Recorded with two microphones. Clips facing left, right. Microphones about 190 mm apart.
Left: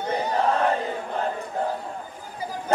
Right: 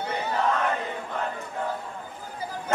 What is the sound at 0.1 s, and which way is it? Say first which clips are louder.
Battle cry: left 4 dB; 35° left (ahead or behind).